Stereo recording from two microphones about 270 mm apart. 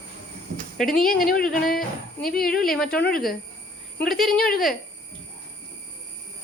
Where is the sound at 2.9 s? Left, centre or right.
Left.